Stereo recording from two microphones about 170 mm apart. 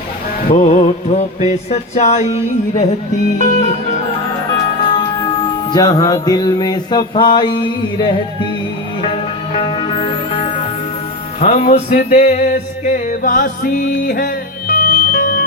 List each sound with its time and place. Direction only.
0.4 s mantra: 40° left (ahead or behind)
3.3 s music: 45° left (ahead or behind)
5.7 s mantra: 20° left (ahead or behind)
9.6 s music: 30° left (ahead or behind)
11.3 s music: 40° left (ahead or behind)